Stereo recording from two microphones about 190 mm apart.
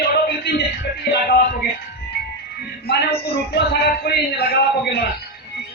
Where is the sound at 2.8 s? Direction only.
60° left (ahead or behind).